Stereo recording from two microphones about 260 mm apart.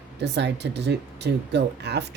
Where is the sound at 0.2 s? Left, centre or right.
Right.